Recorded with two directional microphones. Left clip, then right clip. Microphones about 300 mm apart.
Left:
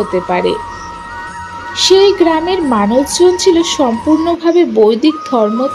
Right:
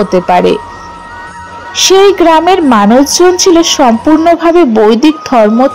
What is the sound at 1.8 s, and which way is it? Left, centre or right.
Speech, right.